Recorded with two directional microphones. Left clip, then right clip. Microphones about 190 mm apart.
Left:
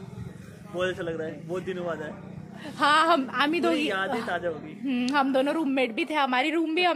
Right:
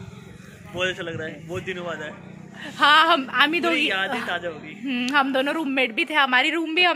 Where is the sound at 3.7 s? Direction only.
20° left (ahead or behind).